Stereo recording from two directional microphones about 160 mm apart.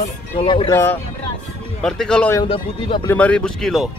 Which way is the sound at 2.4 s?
35° left (ahead or behind).